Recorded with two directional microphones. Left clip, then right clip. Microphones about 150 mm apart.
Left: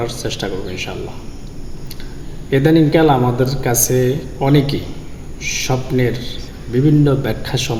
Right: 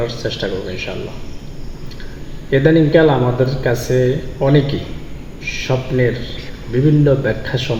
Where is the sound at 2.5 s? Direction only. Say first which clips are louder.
Right 1 dB; 30° left (ahead or behind).